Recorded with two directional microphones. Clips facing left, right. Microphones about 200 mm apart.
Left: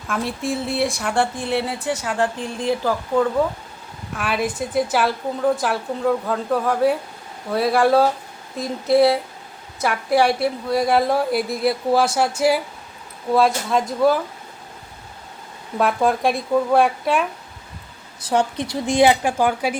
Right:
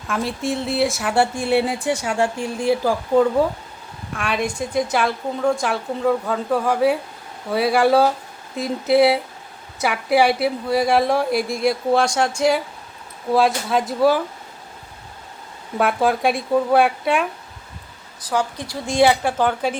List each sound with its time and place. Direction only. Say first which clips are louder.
0.1 s speech: right 1 dB; centre (ahead or behind)
4.1 s a woman's voice: even; 5° left (ahead or behind)
15.8 s a woman's voice: even; 5° right (ahead or behind)
18.2 s speech: left 3 dB; 25° left (ahead or behind)